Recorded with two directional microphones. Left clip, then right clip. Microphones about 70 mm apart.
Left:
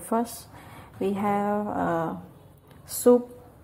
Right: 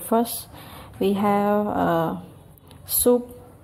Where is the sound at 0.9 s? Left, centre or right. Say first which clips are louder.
Right 5 dB; right.